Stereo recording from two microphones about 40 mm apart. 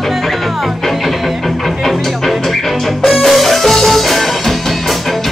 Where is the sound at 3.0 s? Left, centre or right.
Centre.